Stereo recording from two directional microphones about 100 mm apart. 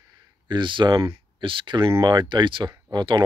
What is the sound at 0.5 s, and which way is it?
Speech, 55° right (ahead or behind).